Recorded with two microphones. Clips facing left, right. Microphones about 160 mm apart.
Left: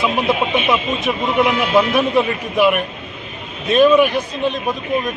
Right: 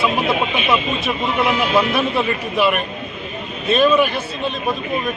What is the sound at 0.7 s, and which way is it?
Speech, 15° left (ahead or behind).